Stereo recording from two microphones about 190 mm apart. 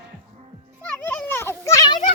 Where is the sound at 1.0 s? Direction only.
10° left (ahead or behind).